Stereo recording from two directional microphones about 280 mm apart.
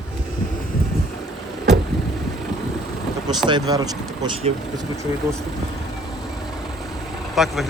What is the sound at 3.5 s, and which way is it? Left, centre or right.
Speech, centre.